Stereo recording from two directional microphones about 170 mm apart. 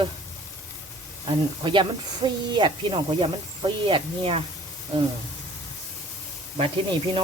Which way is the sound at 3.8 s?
30° right (ahead or behind).